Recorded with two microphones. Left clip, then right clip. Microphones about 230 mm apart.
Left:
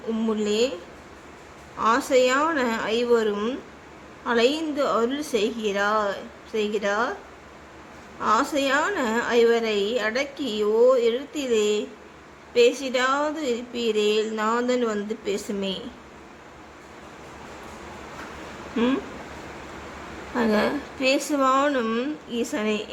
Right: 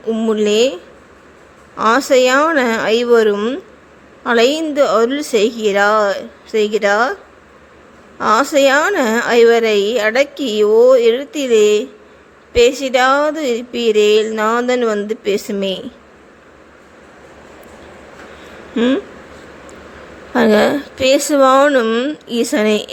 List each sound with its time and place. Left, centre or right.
0.1 s a woman's voice: right
1.8 s a woman's voice: right
8.2 s a woman's voice: right
20.3 s a woman's voice: right